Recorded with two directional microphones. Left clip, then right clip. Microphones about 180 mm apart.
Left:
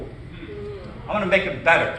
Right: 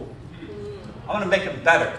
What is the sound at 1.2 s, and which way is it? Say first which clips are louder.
Speech: left 1 dB; 30° right (ahead or behind).